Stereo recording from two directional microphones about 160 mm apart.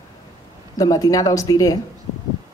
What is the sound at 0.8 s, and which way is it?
Speech, 20° left (ahead or behind).